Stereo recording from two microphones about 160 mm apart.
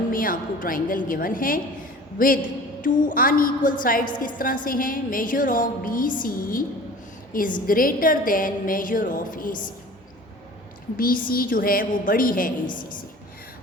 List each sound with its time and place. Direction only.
0.1 s a woman's voice: 60° left (ahead or behind)
10.9 s a woman's voice: 60° left (ahead or behind)